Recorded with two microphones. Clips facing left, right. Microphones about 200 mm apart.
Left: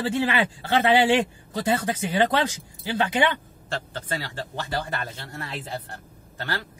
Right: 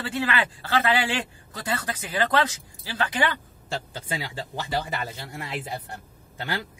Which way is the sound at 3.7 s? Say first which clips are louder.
Left 1 dB; 10° right (ahead or behind).